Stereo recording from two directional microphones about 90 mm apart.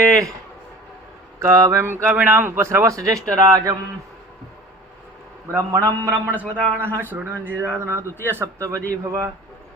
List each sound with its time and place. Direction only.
1.4 s speech: 35° right (ahead or behind)
5.5 s speech: 30° right (ahead or behind)